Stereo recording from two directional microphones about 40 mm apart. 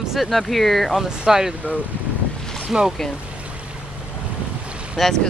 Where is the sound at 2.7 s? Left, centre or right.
Centre.